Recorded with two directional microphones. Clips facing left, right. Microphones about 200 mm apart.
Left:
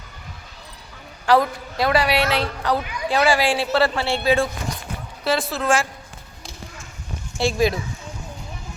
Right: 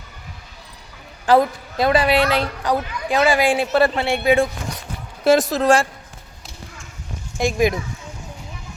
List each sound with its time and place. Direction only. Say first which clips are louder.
1.3 s a woman's voice: right 2 dB; 20° right (ahead or behind)
5.2 s speech: right 7 dB; 45° right (ahead or behind)
7.3 s speech: right 1 dB; 15° right (ahead or behind)